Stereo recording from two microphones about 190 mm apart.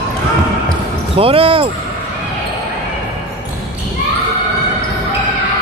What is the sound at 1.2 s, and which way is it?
Speech, 30° right (ahead or behind).